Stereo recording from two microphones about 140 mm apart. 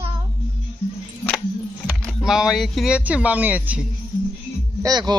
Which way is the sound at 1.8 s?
5° left (ahead or behind).